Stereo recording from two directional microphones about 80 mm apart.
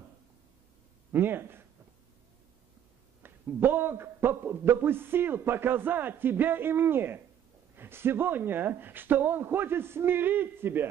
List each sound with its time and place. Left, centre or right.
1.1 s a man's voice: right
3.2 s a man's voice: right